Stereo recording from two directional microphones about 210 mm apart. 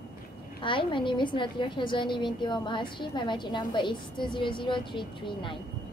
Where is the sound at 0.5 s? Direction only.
25° left (ahead or behind).